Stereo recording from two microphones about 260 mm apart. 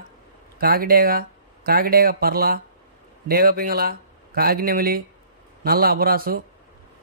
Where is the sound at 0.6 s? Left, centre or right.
Right.